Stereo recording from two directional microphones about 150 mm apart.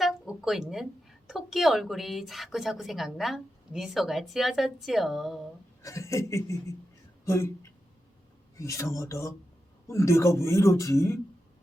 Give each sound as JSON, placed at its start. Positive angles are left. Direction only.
{"t": 0.0, "sound": "a sound", "side_deg": -5}
{"t": 1.3, "sound": "a woman's voice", "side_deg": 0}
{"t": 5.8, "sound": "speech", "side_deg": 20}